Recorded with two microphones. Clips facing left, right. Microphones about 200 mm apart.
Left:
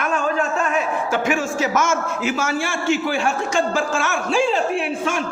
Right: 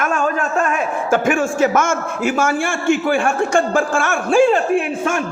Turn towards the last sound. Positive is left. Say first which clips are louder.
# right 4 dB
turn(degrees=-50)  # may be behind; listen again after turning